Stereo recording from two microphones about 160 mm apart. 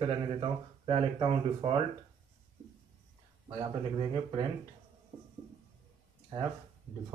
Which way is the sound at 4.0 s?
35° right (ahead or behind).